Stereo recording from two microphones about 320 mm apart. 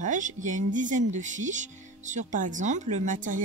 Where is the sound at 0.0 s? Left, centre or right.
Right.